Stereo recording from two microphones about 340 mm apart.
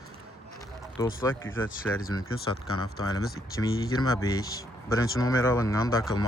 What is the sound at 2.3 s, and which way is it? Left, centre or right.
Speech, left.